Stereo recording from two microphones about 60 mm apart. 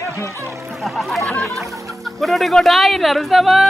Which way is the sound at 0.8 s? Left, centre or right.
Centre.